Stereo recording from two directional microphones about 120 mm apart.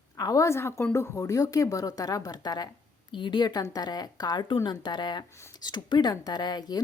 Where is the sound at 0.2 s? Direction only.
30° left (ahead or behind).